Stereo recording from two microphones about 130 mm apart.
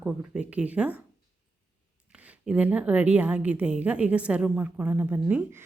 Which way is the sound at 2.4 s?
10° right (ahead or behind).